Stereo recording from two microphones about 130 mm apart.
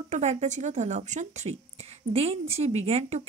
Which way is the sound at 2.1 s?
50° right (ahead or behind).